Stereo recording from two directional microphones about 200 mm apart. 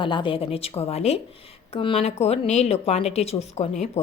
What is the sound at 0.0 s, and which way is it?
A woman's voice, 25° left (ahead or behind).